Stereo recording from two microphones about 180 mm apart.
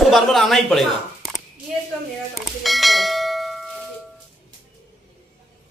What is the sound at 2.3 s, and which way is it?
Bell, centre (ahead or behind).